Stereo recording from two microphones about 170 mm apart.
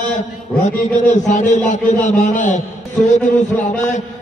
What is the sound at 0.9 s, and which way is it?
A man's voice, 45° left (ahead or behind).